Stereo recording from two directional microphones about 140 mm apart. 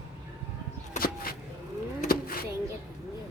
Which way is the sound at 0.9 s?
90° left.